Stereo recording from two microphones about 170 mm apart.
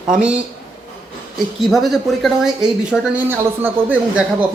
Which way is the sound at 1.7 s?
Centre (ahead or behind).